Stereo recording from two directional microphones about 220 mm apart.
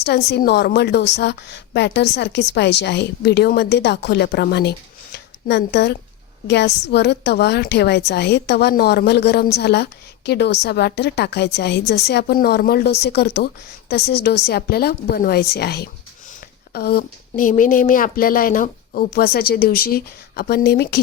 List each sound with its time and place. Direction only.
0.3 s a woman's voice: 50° left (ahead or behind)